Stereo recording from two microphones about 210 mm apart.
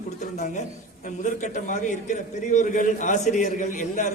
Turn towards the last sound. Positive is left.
turn(degrees=35)  # may be behind; listen again after turning